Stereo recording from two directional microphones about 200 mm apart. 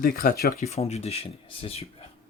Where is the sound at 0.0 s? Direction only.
45° left (ahead or behind).